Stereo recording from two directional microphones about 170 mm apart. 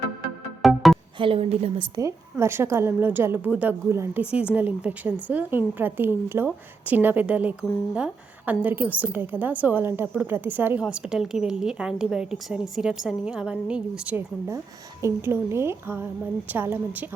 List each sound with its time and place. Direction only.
0.6 s music: centre (ahead or behind)
1.2 s a woman's voice: 35° right (ahead or behind)
2.3 s a woman's voice: 15° right (ahead or behind)